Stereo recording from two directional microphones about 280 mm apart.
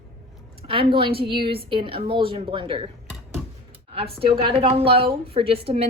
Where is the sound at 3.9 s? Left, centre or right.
Centre.